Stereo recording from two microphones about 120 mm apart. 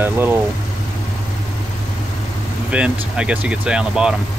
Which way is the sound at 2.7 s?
10° right (ahead or behind).